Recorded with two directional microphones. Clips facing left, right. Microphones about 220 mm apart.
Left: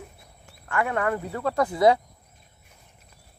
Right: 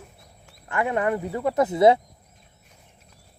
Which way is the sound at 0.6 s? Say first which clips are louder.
Right 2 dB; 20° right (ahead or behind).